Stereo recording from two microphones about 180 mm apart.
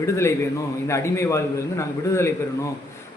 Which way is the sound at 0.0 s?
15° left (ahead or behind).